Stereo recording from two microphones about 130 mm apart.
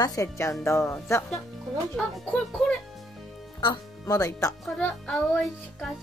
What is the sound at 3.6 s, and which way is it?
Speech, 30° left (ahead or behind).